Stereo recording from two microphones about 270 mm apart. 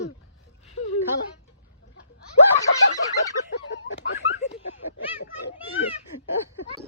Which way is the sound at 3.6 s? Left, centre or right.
Left.